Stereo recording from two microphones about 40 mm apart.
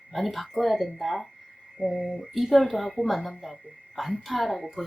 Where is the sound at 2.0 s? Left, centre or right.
Left.